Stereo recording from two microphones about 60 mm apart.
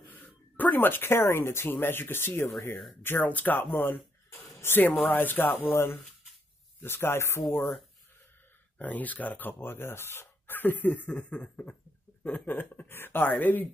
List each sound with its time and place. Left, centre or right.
0.6 s speech: left
3.3 s speech: left
8.7 s speech: left
12.4 s speech: left